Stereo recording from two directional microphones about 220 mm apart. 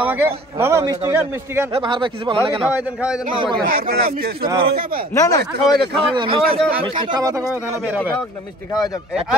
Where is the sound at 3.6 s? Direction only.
40° right (ahead or behind).